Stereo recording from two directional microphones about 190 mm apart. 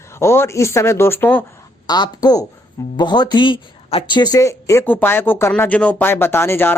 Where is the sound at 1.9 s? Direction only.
20° left (ahead or behind).